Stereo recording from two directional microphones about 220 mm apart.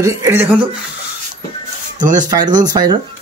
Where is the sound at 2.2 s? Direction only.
20° right (ahead or behind).